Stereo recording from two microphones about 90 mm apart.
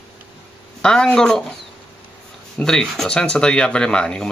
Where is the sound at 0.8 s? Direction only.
10° left (ahead or behind).